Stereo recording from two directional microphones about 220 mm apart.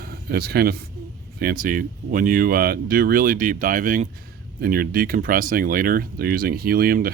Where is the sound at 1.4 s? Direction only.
40° right (ahead or behind).